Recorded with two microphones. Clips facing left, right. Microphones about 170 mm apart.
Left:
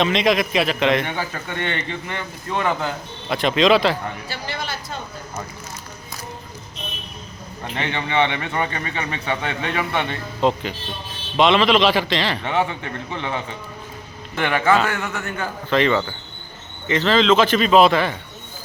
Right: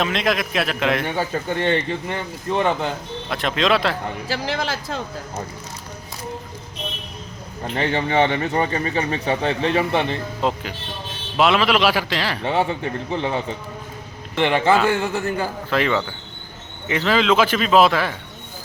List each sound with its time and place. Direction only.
0.0 s a man's voice: centre (ahead or behind)
1.1 s speech: 30° right (ahead or behind)
3.2 s a man's voice: centre (ahead or behind)
4.3 s speech: 90° right
7.8 s speech: 40° right (ahead or behind)
10.4 s a man's voice: 5° right (ahead or behind)
12.5 s a man's voice: 30° right (ahead or behind)
15.7 s a man's voice: 5° right (ahead or behind)